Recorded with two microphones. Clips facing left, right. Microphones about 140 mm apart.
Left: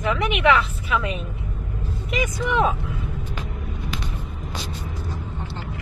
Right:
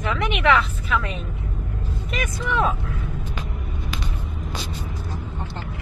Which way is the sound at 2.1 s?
15° left (ahead or behind).